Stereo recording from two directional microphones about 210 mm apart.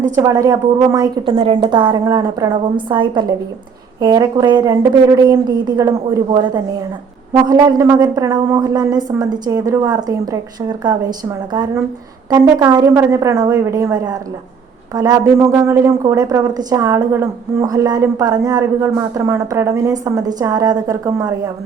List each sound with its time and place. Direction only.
0.2 s a woman's voice: 15° right (ahead or behind)